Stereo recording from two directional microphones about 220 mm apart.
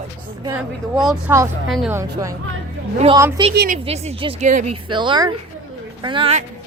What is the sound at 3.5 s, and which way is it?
Speech, 40° right (ahead or behind).